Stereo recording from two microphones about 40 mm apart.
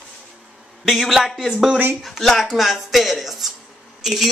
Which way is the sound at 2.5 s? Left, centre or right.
Centre.